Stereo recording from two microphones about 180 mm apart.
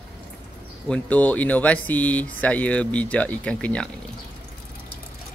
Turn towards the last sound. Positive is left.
turn(degrees=5)  # may be behind; listen again after turning